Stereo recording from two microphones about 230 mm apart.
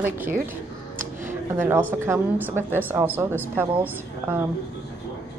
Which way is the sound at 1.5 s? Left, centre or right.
Centre.